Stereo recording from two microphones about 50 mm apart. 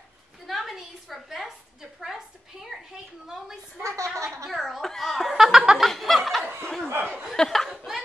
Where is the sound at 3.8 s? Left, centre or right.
Right.